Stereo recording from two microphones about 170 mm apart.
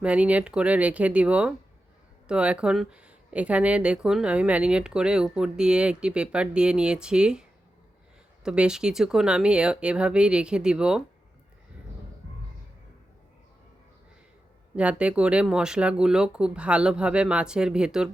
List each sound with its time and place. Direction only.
0.0 s speech: 5° right (ahead or behind)
8.4 s speech: 5° right (ahead or behind)
14.8 s speech: 5° right (ahead or behind)